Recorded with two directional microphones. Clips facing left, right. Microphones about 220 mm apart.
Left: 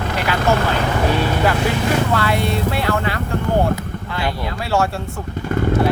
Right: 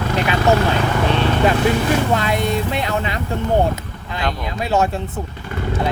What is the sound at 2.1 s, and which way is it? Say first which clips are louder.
Speech: even; 20° right (ahead or behind).